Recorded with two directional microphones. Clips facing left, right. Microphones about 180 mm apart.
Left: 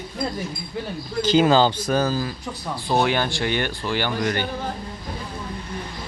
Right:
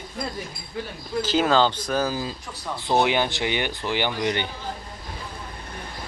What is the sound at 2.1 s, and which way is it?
Speech, 15° right (ahead or behind).